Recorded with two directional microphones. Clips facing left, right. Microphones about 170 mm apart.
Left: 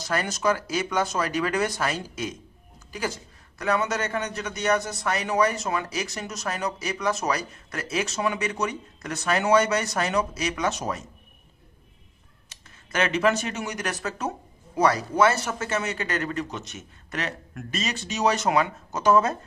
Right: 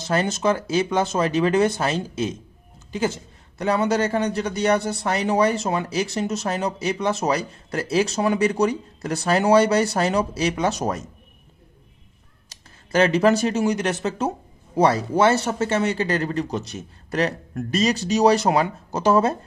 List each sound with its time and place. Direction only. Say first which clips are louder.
0.0 s a man's voice: right 4 dB; 25° right (ahead or behind)
10.8 s speech: right 5 dB; 45° right (ahead or behind)
12.4 s a man's voice: right 4 dB; 35° right (ahead or behind)